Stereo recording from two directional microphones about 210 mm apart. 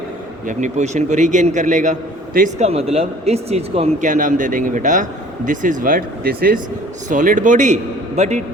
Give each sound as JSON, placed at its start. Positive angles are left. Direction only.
{"t": 0.4, "sound": "a man's voice", "side_deg": -35}